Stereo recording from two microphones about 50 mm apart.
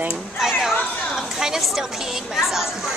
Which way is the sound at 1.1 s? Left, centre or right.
Centre.